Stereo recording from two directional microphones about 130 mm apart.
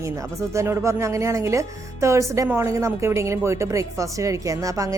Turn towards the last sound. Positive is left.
turn(degrees=-25)  # may be behind; listen again after turning